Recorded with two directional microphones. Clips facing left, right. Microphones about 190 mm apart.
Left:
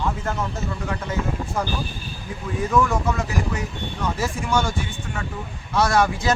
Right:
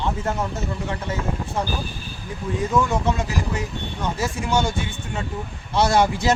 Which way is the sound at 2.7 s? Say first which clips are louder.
Left 1 dB; 20° right (ahead or behind).